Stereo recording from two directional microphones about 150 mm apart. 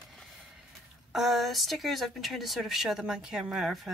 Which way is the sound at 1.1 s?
Centre (ahead or behind).